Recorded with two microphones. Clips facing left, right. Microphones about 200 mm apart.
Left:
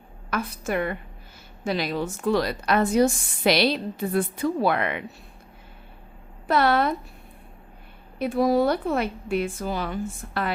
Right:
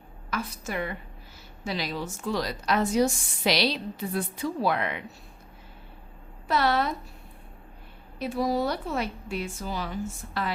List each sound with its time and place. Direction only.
0.3 s a woman's voice: 55° left (ahead or behind)
6.5 s a woman's voice: 55° left (ahead or behind)
8.2 s a woman's voice: 55° left (ahead or behind)